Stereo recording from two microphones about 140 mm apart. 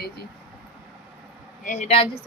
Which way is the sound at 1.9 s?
40° left (ahead or behind).